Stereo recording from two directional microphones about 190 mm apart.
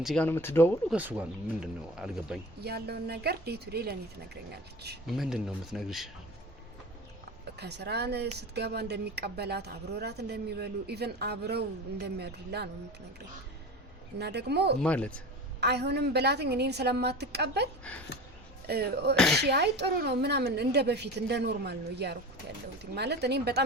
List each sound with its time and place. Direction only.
0.0 s speech: centre (ahead or behind)
0.3 s speech: 10° left (ahead or behind)
0.9 s speech: 5° right (ahead or behind)
2.6 s speech: 55° right (ahead or behind)
5.0 s speech: centre (ahead or behind)
7.5 s speech: 60° right (ahead or behind)
14.2 s speech: 60° right (ahead or behind)
14.8 s speech: 5° left (ahead or behind)
15.6 s speech: 60° right (ahead or behind)
18.7 s speech: 55° right (ahead or behind)
19.1 s speech: centre (ahead or behind)
19.4 s speech: 60° right (ahead or behind)